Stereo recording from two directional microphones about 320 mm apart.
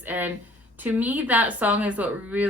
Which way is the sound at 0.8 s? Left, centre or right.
Centre.